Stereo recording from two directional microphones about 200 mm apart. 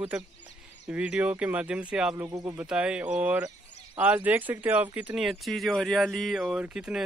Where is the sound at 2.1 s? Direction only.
20° right (ahead or behind).